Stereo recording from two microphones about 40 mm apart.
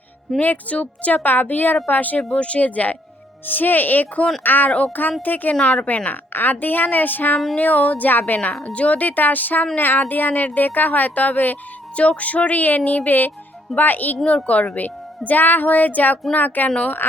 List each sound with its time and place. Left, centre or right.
0.3 s music: left
1.2 s a woman's voice: left
2.3 s music: left
3.4 s a woman's voice: left
5.6 s music: left
6.3 s a woman's voice: left
7.6 s a woman's voice: left
11.9 s music: left
13.1 s a woman's voice: left
14.3 s a woman's voice: left
16.3 s music: left
17.0 s speech: left